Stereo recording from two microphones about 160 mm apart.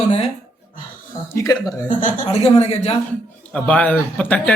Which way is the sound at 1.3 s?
20° left (ahead or behind).